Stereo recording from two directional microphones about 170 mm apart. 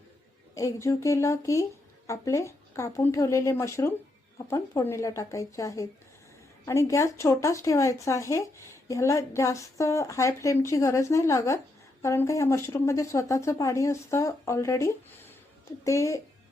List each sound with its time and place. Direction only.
0.5 s speech: 20° left (ahead or behind)